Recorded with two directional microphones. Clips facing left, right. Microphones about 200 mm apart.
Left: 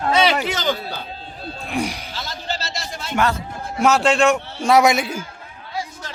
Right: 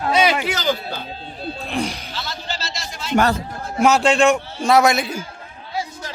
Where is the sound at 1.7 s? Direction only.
15° left (ahead or behind).